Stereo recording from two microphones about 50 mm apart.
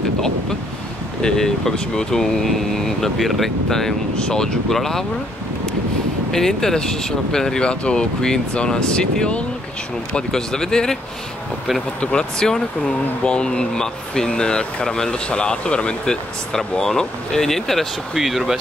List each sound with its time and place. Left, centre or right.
1.2 s speech: centre
6.3 s speech: centre
12.0 s speech: centre